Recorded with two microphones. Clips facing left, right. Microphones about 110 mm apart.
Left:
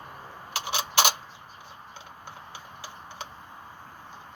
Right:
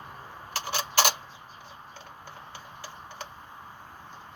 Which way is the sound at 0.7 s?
20° left (ahead or behind).